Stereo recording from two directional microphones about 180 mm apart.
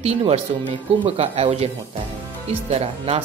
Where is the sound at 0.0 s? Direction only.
35° right (ahead or behind).